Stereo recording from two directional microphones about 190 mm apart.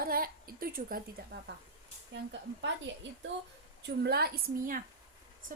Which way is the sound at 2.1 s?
75° right (ahead or behind).